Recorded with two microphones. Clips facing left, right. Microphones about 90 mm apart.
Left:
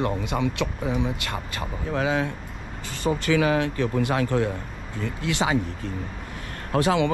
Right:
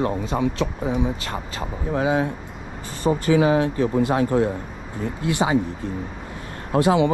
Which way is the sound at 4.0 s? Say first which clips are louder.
Right 4 dB; 25° right (ahead or behind).